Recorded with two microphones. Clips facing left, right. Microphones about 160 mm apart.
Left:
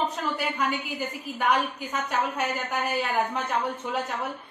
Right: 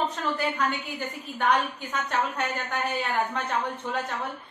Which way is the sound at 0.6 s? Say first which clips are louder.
Left 1 dB; 5° left (ahead or behind).